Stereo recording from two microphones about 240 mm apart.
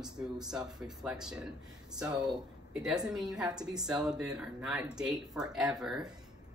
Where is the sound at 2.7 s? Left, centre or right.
Centre.